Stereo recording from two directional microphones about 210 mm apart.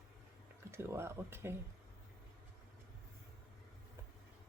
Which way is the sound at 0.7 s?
10° right (ahead or behind).